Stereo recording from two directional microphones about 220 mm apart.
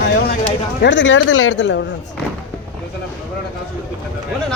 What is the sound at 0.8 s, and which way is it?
Speech, 55° left (ahead or behind).